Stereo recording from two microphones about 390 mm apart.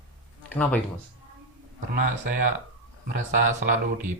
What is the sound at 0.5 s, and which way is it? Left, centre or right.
Speech, centre.